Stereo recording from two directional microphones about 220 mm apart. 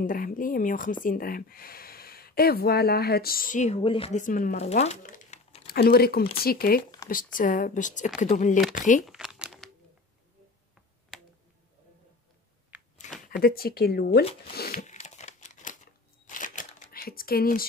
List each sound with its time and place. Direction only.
0.0 s speech: 40° left (ahead or behind)
5.7 s speech: 45° left (ahead or behind)
7.0 s a sound: 15° left (ahead or behind)
7.3 s speech: 35° left (ahead or behind)
8.7 s a sound: 35° left (ahead or behind)
9.0 s crumpling: centre (ahead or behind)
13.2 s speech: 40° left (ahead or behind)
14.5 s a sound: 45° left (ahead or behind)
14.8 s crumpling: 30° left (ahead or behind)